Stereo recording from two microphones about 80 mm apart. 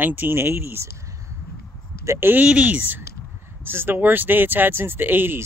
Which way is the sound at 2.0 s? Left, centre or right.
Right.